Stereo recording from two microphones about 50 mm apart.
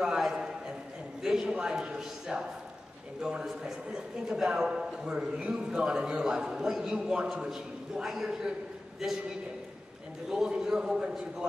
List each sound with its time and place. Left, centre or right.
0.0 s a sound: centre
1.5 s a man's voice: centre
10.3 s a man's voice: centre